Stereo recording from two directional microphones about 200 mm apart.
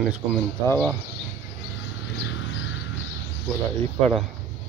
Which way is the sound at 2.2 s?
70° left (ahead or behind).